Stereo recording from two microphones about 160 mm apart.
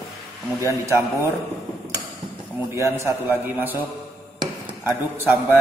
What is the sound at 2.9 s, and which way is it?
A man's voice, 15° right (ahead or behind).